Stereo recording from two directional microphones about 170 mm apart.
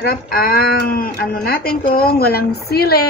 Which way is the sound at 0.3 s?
60° left (ahead or behind).